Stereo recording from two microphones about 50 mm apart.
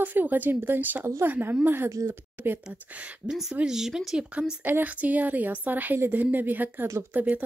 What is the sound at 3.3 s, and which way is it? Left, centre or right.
Speech, centre.